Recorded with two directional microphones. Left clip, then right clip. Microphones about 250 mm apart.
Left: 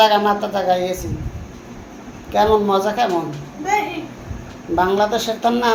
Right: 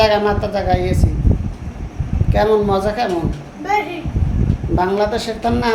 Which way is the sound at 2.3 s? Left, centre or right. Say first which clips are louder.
Even; centre.